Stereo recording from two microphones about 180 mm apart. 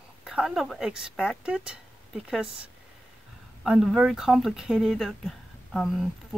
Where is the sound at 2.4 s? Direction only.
30° right (ahead or behind).